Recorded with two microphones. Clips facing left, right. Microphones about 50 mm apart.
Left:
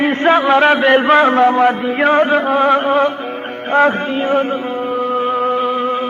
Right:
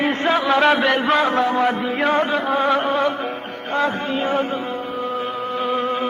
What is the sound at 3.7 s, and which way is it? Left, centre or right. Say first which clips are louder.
Speech: left 8 dB; left.